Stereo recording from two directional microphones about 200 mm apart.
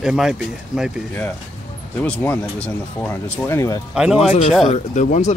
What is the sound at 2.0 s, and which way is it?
Speech, 10° left (ahead or behind).